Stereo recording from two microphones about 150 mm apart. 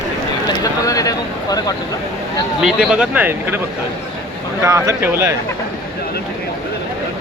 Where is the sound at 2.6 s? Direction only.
5° right (ahead or behind).